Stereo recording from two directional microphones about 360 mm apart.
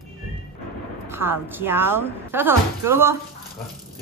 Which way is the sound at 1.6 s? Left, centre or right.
Centre.